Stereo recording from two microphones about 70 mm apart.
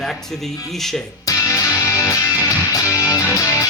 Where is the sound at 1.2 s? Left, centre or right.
Left.